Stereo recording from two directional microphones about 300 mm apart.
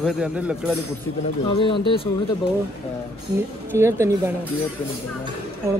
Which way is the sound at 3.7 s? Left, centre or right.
Centre.